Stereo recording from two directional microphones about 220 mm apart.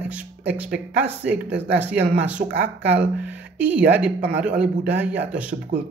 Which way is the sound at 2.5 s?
50° right (ahead or behind).